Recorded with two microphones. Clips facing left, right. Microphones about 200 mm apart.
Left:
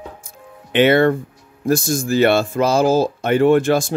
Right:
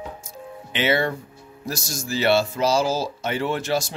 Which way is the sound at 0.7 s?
55° left (ahead or behind).